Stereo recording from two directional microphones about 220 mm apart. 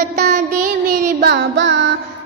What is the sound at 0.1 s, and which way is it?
Child singing, 45° right (ahead or behind).